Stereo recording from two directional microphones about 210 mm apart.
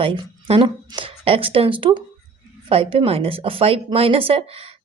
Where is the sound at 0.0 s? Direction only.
25° right (ahead or behind).